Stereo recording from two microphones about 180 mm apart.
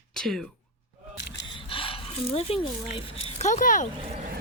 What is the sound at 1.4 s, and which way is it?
Speech, 30° left (ahead or behind).